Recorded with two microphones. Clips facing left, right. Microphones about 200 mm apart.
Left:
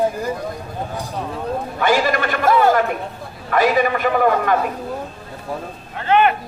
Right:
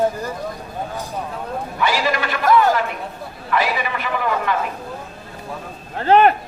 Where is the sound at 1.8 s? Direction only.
50° left (ahead or behind).